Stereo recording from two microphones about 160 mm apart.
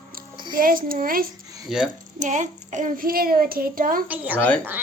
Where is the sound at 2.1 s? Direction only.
50° right (ahead or behind).